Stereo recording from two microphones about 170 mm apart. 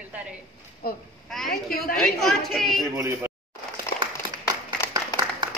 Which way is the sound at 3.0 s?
15° right (ahead or behind).